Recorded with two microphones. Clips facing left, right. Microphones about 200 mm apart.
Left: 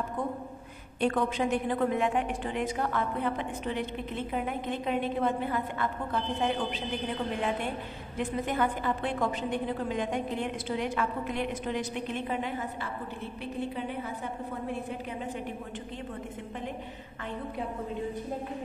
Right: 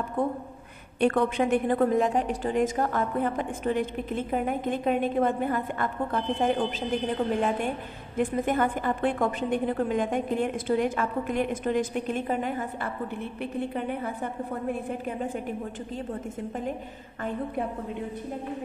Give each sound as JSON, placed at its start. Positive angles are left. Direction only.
{"t": 0.9, "sound": "a woman's voice", "side_deg": -60}
{"t": 8.2, "sound": "a woman's voice", "side_deg": -50}